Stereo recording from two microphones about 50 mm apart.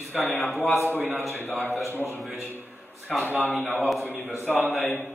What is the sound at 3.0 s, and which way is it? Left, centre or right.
Speech, left.